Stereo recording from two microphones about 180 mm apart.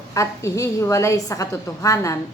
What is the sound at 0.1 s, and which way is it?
A woman's voice, 15° left (ahead or behind).